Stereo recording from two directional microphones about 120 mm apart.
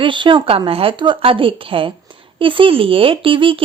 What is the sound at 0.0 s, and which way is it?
Speech, 45° right (ahead or behind).